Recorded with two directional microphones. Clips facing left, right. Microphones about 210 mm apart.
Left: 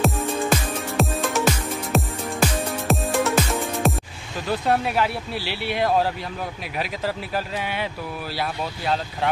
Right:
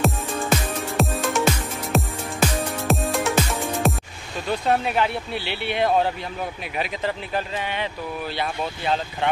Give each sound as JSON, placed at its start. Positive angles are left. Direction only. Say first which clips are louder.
{"t": 0.0, "sound": "music", "louder": "left 2 dB", "side_deg": 0}
{"t": 4.5, "sound": "speech", "louder": "even", "side_deg": 0}